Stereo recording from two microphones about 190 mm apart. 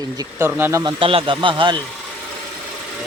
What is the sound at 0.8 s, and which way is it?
Speech, 30° right (ahead or behind).